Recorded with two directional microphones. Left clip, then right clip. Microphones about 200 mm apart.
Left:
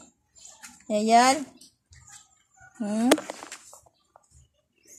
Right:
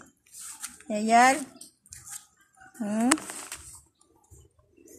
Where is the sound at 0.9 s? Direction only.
35° left (ahead or behind).